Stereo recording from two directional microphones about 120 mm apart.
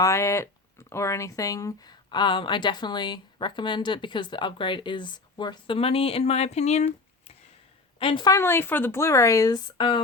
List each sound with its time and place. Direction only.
0.0 s speech: 25° left (ahead or behind); by 6.9 s 70° left (ahead or behind)
7.9 s a woman's voice: 45° left (ahead or behind)
8.3 s speech: 20° left (ahead or behind); by 10.0 s 40° left (ahead or behind)